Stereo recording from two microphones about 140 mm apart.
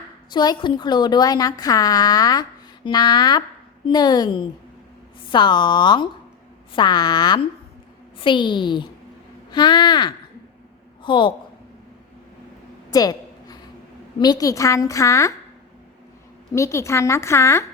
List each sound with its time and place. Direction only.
0.3 s a woman's voice: 30° left (ahead or behind)
12.9 s a sound: 25° left (ahead or behind)
14.2 s a woman's voice: 30° left (ahead or behind)
16.6 s a woman's voice: 20° left (ahead or behind)